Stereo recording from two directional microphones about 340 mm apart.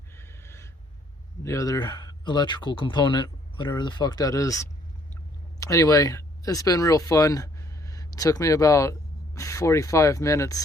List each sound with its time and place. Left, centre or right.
0.2 s gasp: centre
1.5 s speech: centre